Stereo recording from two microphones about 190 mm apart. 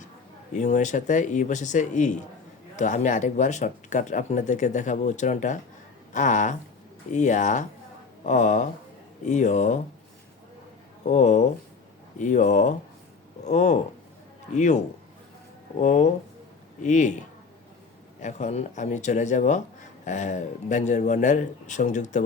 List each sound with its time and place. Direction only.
0.5 s speech: 40° left (ahead or behind)
11.0 s speech: 40° left (ahead or behind)
15.8 s speech: 40° left (ahead or behind)
18.2 s speech: 40° left (ahead or behind)